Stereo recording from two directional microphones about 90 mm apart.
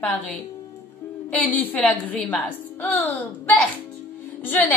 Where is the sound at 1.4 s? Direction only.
20° left (ahead or behind).